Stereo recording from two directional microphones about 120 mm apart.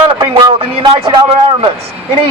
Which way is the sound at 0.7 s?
50° right (ahead or behind).